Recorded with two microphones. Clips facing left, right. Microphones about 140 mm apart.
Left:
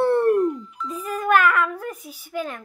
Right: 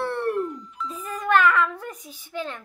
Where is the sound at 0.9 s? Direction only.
10° left (ahead or behind).